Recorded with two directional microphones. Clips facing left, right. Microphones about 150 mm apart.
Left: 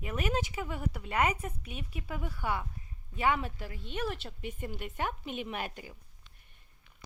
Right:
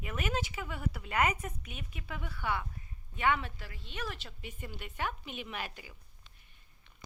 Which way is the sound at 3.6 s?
50° left (ahead or behind).